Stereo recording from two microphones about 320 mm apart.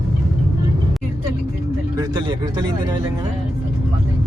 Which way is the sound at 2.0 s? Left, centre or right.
Centre.